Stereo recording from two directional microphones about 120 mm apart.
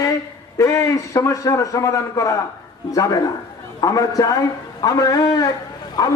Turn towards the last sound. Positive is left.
turn(degrees=30)  # may be behind; listen again after turning